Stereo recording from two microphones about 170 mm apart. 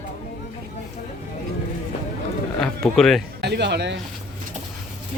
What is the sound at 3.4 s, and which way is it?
Speech, 80° right.